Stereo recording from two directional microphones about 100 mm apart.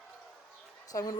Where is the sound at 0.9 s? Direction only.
35° left (ahead or behind).